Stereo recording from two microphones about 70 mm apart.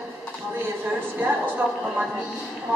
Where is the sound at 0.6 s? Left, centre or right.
Right.